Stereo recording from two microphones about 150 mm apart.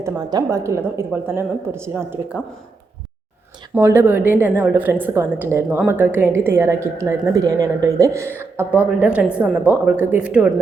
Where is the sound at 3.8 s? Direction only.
15° right (ahead or behind).